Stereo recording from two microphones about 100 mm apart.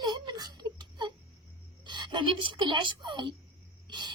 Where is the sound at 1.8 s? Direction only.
50° right (ahead or behind).